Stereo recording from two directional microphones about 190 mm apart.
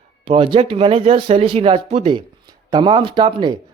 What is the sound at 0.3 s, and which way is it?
Speech, 30° right (ahead or behind).